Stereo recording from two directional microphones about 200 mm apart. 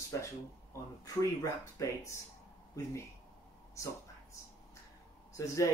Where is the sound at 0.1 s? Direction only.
15° left (ahead or behind).